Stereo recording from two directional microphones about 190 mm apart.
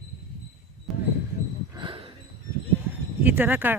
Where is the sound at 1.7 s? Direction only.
25° right (ahead or behind).